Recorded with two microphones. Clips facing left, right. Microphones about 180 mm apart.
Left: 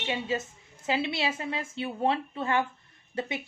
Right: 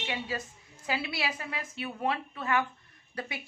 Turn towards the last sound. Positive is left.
turn(degrees=25)  # may be behind; listen again after turning